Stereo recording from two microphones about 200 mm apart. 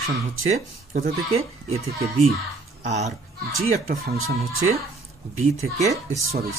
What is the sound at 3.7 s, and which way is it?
Speech, 50° right (ahead or behind).